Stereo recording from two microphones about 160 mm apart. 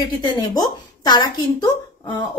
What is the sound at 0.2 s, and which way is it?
Speech, 25° left (ahead or behind).